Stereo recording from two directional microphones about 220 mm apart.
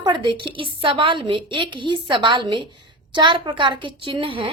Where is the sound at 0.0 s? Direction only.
20° right (ahead or behind).